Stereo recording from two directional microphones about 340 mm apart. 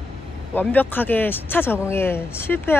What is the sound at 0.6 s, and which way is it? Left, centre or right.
Speech, centre.